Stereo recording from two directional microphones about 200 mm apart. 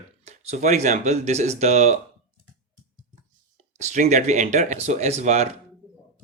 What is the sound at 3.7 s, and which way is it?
Speech, 35° right (ahead or behind).